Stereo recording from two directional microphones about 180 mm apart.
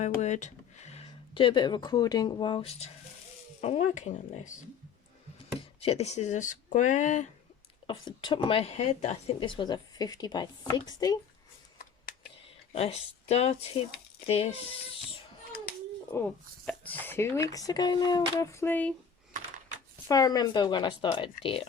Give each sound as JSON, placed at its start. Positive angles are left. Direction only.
{"t": 0.2, "sound": "speech", "side_deg": 40}
{"t": 5.5, "sound": "speech", "side_deg": 35}
{"t": 7.9, "sound": "speech", "side_deg": 25}
{"t": 12.1, "sound": "whispering", "side_deg": 50}
{"t": 12.7, "sound": "speech", "side_deg": 35}
{"t": 16.1, "sound": "speech", "side_deg": 10}
{"t": 20.1, "sound": "speech", "side_deg": 20}